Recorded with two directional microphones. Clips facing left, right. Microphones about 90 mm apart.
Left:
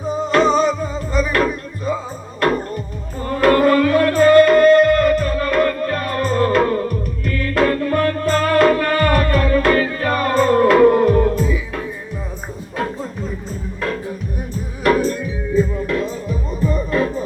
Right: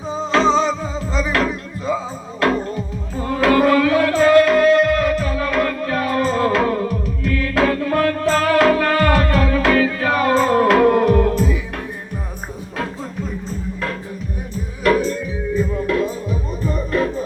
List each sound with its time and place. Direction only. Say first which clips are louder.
0.3 s music: left 1 dB; 90° right
3.2 s music: left 1 dB; 90° right
4.4 s music: left 3 dB; centre (ahead or behind)
7.3 s music: even; 90° right; by 11.8 s 65° right (ahead or behind)
14.8 s music: left 1 dB; 45° left (ahead or behind)